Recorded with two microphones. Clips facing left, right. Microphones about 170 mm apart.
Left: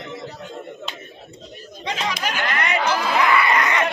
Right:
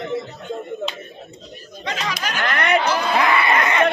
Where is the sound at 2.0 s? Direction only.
25° left (ahead or behind).